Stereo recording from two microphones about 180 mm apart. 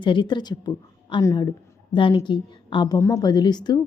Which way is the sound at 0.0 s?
25° left (ahead or behind).